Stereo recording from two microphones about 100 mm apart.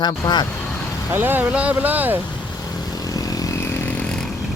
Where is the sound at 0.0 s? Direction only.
45° left (ahead or behind).